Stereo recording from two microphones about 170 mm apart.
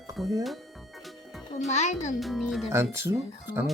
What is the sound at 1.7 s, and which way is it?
Speech, 45° left (ahead or behind).